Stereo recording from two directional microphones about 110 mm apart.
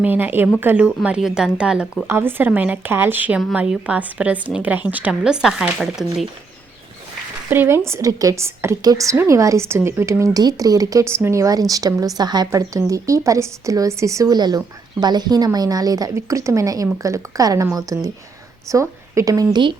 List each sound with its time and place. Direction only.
0.0 s a woman's voice: 15° right (ahead or behind)
2.0 s a woman's voice: 20° right (ahead or behind); by 6.1 s 5° right (ahead or behind)
7.5 s speech: 20° right (ahead or behind)
7.9 s speech: 30° right (ahead or behind)